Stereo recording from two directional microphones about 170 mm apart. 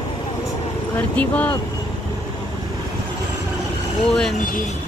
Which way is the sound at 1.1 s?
10° left (ahead or behind).